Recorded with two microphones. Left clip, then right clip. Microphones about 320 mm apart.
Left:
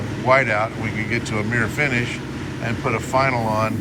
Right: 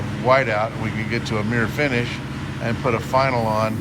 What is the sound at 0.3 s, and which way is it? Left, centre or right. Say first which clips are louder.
Speech: left 1 dB; centre.